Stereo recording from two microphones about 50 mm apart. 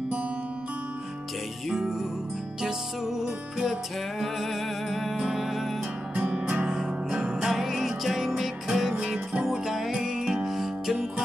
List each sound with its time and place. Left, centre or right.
1.7 s music: centre
4.2 s music: centre
6.1 s music: right
7.5 s music: centre
8.9 s music: right